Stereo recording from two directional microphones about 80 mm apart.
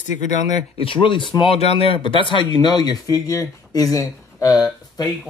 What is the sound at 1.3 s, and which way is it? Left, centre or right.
Speech, left.